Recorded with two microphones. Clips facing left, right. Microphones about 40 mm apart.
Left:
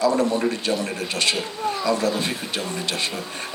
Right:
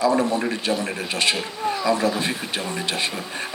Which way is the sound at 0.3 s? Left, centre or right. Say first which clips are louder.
Left 1 dB; centre.